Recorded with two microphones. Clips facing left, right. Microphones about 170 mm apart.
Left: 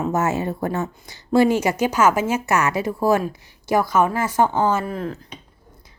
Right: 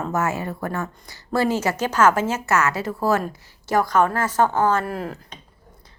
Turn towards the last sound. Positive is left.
turn(degrees=-5)  # may be behind; listen again after turning